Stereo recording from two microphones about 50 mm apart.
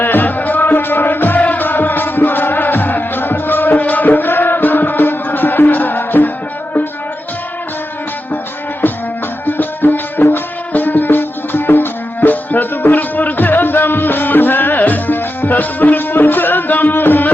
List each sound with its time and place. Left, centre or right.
0.0 s music: left
9.5 s music: left
10.7 s music: left